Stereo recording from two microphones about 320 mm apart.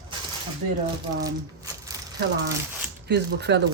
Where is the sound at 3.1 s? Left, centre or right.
Right.